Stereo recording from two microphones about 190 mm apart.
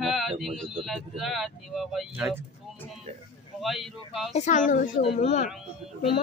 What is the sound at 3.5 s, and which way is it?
Speech, centre (ahead or behind).